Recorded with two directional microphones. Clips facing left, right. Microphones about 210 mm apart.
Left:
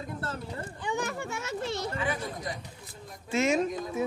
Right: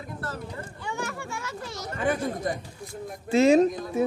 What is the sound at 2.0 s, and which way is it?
Speech, 50° right (ahead or behind).